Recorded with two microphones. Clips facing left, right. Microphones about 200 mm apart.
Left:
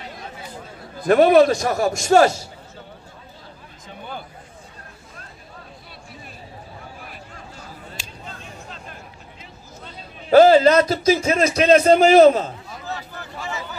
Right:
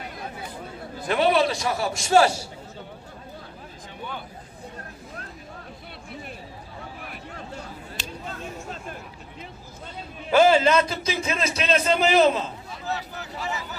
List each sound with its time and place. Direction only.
1.0 s a man's voice: 45° left (ahead or behind)
8.4 s a sound: 45° right (ahead or behind)
10.3 s a man's voice: 40° left (ahead or behind)